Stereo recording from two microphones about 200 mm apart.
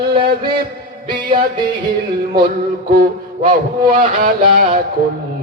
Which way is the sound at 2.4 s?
45° right (ahead or behind).